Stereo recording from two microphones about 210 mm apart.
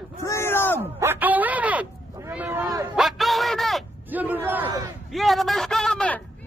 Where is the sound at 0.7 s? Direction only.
10° right (ahead or behind).